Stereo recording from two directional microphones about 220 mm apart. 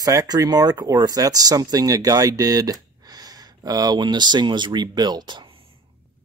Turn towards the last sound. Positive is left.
turn(degrees=-25)  # may be behind; listen again after turning